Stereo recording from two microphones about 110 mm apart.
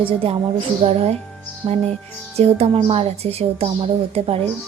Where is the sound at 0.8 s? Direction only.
60° right (ahead or behind).